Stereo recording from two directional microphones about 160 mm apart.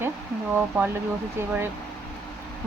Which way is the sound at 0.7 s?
10° right (ahead or behind).